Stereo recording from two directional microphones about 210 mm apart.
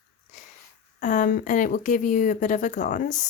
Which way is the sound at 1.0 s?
35° left (ahead or behind).